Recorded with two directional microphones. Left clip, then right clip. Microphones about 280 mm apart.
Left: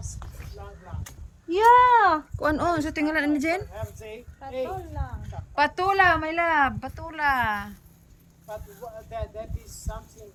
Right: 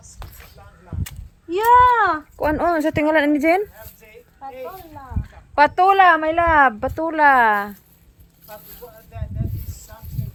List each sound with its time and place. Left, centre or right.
1.5 s speech: centre
4.4 s speech: centre
5.5 s speech: centre
9.1 s snake: left